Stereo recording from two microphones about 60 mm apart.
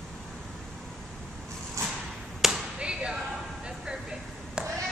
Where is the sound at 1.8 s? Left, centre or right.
Right.